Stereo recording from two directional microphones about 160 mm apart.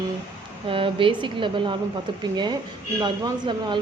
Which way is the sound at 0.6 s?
35° right (ahead or behind).